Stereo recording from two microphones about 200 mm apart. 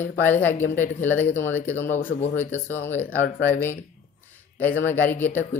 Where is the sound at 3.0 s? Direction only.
45° left (ahead or behind).